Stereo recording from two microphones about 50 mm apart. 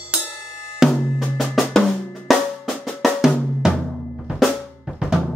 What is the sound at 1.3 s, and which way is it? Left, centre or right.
Drum, centre.